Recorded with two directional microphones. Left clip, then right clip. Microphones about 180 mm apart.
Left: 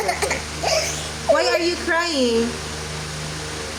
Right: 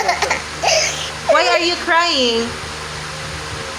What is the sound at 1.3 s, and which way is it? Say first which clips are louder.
Speech: right 5 dB; 30° left (ahead or behind).